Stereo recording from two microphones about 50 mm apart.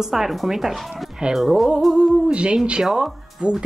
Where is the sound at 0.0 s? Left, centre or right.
Centre.